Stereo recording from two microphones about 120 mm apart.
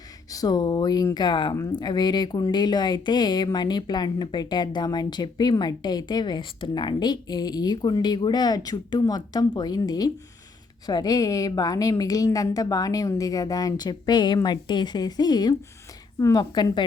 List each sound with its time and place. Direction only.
0.3 s speech: 30° left (ahead or behind)